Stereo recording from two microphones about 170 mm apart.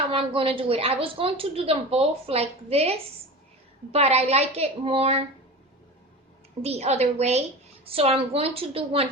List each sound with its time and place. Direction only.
0.1 s a woman's voice: 30° right (ahead or behind)
3.9 s a woman's voice: 40° right (ahead or behind)
6.6 s a woman's voice: 40° right (ahead or behind)